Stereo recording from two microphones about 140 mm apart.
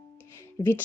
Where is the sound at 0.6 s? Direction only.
30° left (ahead or behind).